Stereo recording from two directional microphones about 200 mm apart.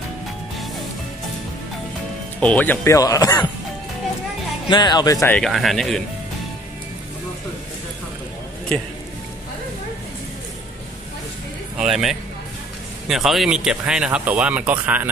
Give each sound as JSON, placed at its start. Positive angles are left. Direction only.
{"t": 2.4, "sound": "speech", "side_deg": 5}
{"t": 4.6, "sound": "speech", "side_deg": 20}
{"t": 5.4, "sound": "speech", "side_deg": 0}
{"t": 11.7, "sound": "a man's voice", "side_deg": -5}